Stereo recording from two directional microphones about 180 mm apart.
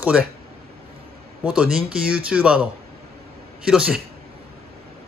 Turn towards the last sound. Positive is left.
turn(degrees=-5)  # may be behind; listen again after turning